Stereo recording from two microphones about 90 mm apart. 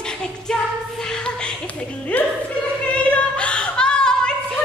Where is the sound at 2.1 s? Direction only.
15° left (ahead or behind).